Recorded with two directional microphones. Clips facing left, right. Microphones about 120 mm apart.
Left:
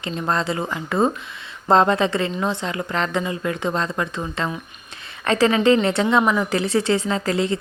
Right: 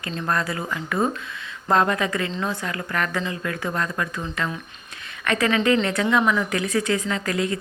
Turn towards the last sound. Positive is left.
turn(degrees=30)  # may be behind; listen again after turning